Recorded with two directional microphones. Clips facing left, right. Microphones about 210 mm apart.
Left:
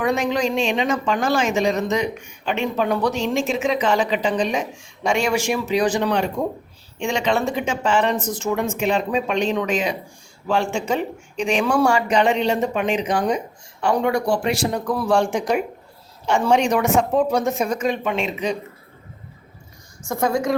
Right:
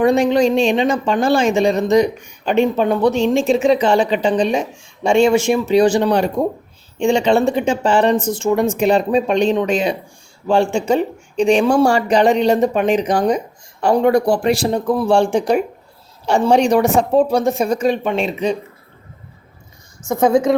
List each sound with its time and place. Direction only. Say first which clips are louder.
0.0 s speech: right 7 dB; 30° right (ahead or behind)
2.7 s speech: right 6 dB; 25° right (ahead or behind)
20.1 s speech: right 7 dB; 20° right (ahead or behind)